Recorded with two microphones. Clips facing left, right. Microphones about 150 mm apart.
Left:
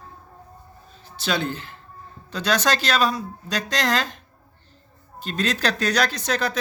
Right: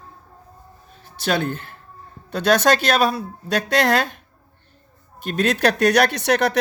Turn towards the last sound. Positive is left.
turn(degrees=-70)  # may be behind; listen again after turning